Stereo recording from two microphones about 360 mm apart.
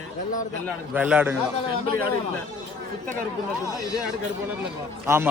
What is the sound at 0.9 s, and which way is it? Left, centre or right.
Speech, centre.